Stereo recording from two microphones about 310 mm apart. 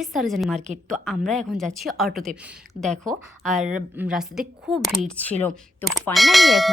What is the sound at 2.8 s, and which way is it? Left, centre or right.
Speech, left.